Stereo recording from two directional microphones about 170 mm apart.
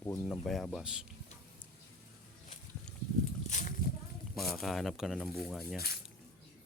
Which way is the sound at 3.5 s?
45° left (ahead or behind).